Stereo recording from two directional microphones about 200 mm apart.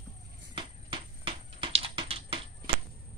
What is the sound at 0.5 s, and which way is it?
Typing, 25° right (ahead or behind).